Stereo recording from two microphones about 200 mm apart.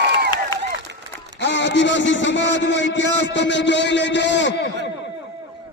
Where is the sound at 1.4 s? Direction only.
60° left (ahead or behind).